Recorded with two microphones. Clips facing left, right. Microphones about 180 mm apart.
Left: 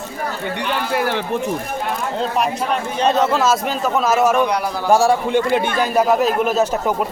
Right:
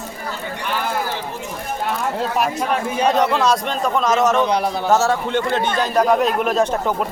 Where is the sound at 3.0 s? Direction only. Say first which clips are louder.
Left 1 dB; 15° right (ahead or behind).